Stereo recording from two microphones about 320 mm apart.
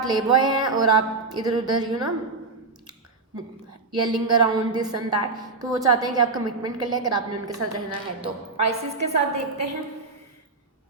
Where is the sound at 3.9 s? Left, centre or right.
Centre.